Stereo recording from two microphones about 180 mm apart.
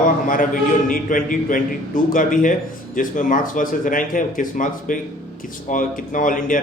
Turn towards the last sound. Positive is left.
turn(degrees=50)  # may be behind; listen again after turning